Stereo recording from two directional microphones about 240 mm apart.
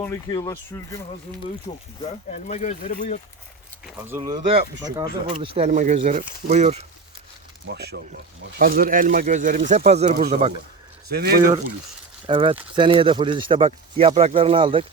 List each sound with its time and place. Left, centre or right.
0.0 s speech: centre
2.0 s speech: left
3.8 s speech: centre
4.2 s speech: right
7.7 s speech: right
12.2 s speech: right